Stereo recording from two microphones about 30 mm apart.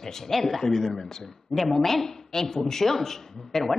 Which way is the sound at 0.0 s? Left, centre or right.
Centre.